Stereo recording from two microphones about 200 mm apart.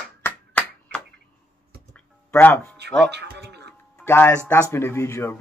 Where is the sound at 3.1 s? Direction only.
55° right (ahead or behind).